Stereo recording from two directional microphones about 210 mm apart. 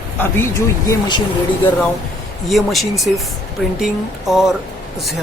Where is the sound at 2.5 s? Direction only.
Centre (ahead or behind).